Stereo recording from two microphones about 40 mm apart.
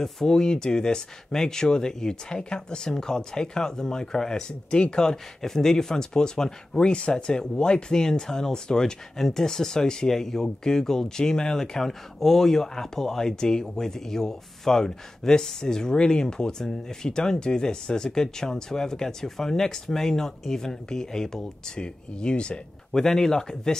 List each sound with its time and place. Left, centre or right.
0.0 s speech: centre
4.6 s speech: left
4.9 s speech: centre
6.9 s speech: left
23.0 s speech: centre